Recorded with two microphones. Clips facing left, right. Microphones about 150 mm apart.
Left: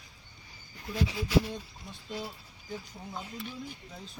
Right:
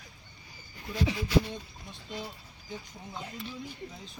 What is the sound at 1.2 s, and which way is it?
Speech, 5° left (ahead or behind).